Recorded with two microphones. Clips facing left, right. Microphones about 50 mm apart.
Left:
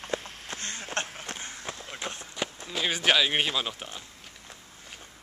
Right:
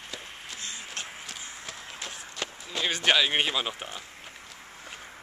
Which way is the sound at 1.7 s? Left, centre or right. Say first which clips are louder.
Left 5 dB; left.